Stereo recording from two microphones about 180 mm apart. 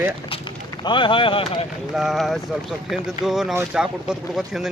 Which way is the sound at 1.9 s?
Centre (ahead or behind).